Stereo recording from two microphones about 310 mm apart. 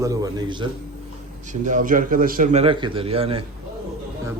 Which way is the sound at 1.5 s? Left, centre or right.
Right.